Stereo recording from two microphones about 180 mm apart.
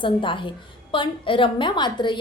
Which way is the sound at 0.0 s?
30° left (ahead or behind).